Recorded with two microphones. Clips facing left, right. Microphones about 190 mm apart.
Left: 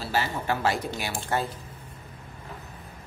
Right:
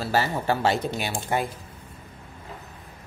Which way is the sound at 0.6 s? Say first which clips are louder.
Right 3 dB; 25° right (ahead or behind).